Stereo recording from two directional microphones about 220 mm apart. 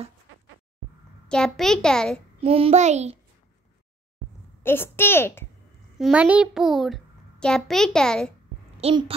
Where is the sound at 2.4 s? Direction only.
25° right (ahead or behind).